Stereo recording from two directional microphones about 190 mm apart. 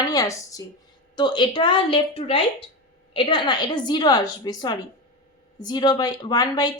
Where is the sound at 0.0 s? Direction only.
20° left (ahead or behind).